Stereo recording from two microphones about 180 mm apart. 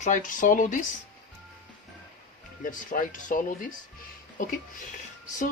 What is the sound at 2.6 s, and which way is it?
Speech, 45° left (ahead or behind).